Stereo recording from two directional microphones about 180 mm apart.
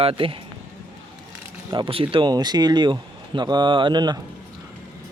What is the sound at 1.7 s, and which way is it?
Speech, 25° right (ahead or behind).